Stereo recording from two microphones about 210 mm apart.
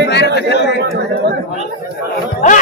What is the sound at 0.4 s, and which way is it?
Chatter, 55° left (ahead or behind).